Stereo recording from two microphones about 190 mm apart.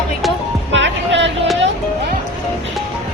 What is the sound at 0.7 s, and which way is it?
Speech, 70° right (ahead or behind).